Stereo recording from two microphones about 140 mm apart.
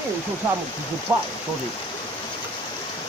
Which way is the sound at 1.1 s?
10° right (ahead or behind).